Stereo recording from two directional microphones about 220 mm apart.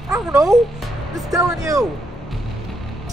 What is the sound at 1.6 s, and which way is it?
Speech, 15° right (ahead or behind).